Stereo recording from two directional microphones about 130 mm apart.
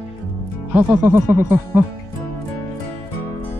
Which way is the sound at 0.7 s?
15° right (ahead or behind).